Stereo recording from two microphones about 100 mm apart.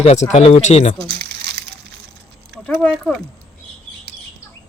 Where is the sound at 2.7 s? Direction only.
15° left (ahead or behind).